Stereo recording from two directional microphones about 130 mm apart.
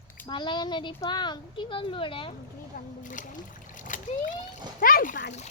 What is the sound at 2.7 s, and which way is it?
Speech, 85° left.